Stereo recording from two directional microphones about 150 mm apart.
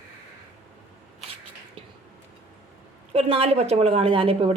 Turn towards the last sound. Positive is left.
turn(degrees=-40)  # may be behind; listen again after turning